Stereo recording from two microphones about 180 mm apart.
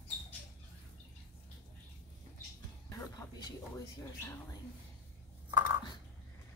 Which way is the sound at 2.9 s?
20° left (ahead or behind).